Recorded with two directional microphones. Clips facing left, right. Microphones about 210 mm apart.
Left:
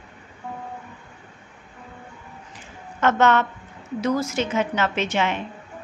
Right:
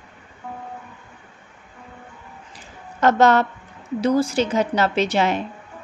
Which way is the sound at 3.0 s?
35° right (ahead or behind).